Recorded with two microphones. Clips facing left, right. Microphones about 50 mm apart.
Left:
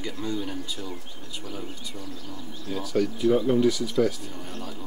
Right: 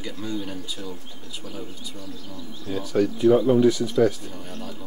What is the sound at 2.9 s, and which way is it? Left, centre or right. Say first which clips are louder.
Speech: right 4 dB; right.